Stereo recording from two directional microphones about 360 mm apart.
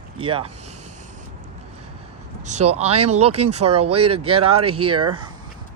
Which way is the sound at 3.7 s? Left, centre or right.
Centre.